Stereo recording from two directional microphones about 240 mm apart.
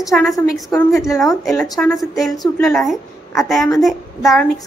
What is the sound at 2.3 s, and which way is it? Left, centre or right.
Speech, centre.